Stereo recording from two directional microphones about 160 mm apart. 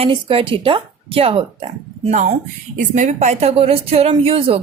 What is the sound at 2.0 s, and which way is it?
Speech, 50° right (ahead or behind).